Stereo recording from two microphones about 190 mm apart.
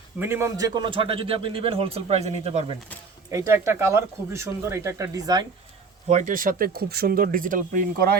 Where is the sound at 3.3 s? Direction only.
15° right (ahead or behind).